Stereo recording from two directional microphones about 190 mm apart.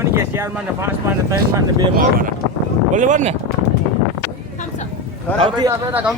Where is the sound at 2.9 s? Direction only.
40° right (ahead or behind).